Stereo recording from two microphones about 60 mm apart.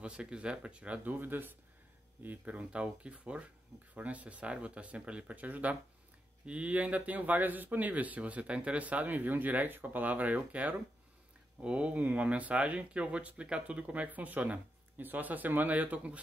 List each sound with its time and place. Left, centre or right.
0.0 s speech: centre; by 1.5 s right
2.2 s speech: right